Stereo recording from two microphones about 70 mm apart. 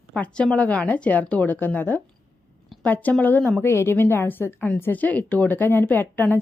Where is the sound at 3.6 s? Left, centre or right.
Left.